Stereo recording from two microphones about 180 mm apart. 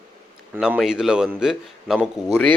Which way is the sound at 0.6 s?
5° right (ahead or behind).